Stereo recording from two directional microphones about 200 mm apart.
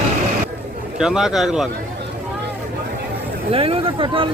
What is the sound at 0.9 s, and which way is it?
Speech, 5° right (ahead or behind).